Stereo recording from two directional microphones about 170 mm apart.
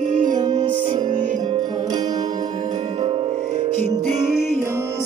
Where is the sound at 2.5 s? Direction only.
45° right (ahead or behind).